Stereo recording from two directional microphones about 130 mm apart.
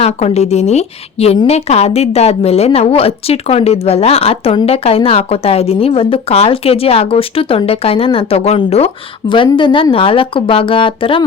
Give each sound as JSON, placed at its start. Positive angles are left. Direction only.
{"t": 0.0, "sound": "a woman's voice", "side_deg": 55}